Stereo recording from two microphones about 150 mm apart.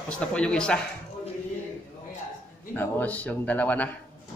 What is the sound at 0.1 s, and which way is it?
Speech, 5° left (ahead or behind).